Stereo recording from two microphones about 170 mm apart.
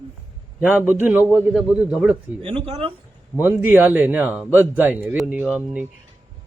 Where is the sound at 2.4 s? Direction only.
30° right (ahead or behind).